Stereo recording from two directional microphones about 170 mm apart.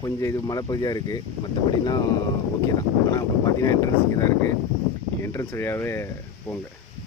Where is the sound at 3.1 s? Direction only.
20° left (ahead or behind).